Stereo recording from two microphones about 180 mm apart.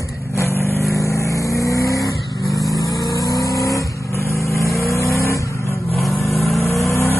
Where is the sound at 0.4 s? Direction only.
15° left (ahead or behind).